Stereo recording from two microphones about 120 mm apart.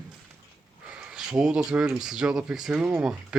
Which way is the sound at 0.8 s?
5° right (ahead or behind).